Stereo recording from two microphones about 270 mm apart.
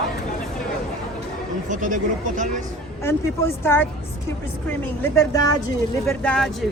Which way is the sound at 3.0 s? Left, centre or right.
Centre.